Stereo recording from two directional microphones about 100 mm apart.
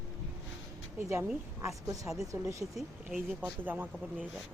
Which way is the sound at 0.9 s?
25° right (ahead or behind).